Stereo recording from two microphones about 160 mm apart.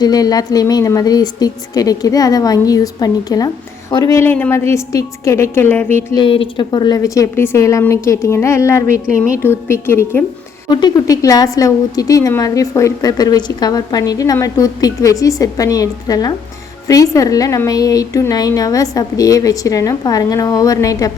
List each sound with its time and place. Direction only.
0.0 s a woman's voice: 25° left (ahead or behind)
6.1 s a woman's voice: 35° left (ahead or behind); by 10.2 s 15° left (ahead or behind)
10.7 s a woman's voice: 25° left (ahead or behind)